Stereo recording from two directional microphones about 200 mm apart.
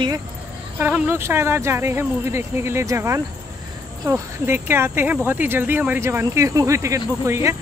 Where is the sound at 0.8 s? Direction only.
10° right (ahead or behind).